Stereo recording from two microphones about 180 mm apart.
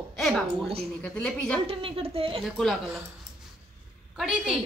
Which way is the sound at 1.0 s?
5° left (ahead or behind).